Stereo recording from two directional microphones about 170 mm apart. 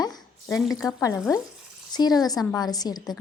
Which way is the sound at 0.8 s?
20° left (ahead or behind).